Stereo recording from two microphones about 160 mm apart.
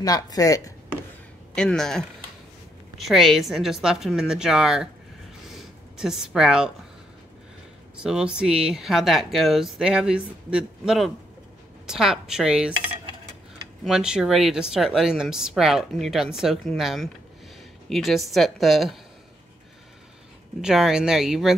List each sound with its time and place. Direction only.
0.0 s speech: 25° left (ahead or behind)
1.5 s speech: 5° left (ahead or behind)
5.5 s a sound: centre (ahead or behind)
8.0 s speech: 5° right (ahead or behind)
13.8 s speech: 5° right (ahead or behind)
20.6 s speech: 5° right (ahead or behind)